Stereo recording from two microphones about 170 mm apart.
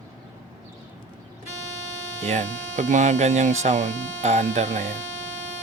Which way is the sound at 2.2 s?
45° right (ahead or behind).